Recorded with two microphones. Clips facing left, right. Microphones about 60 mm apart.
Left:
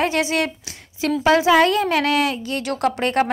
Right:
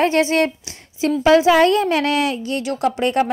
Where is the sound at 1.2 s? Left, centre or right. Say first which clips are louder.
Right 2 dB; left.